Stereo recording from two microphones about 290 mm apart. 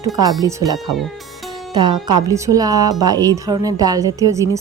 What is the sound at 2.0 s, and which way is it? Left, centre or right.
A woman's voice, centre.